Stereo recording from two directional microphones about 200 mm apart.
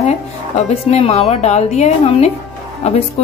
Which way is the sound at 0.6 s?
30° left (ahead or behind).